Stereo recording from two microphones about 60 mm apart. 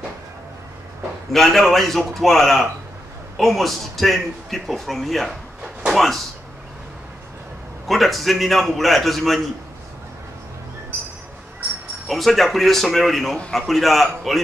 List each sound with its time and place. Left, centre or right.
1.3 s a man's voice: centre
5.6 s a sound: centre
5.9 s a man's voice: centre
7.9 s a man's voice: centre
12.1 s a man's voice: centre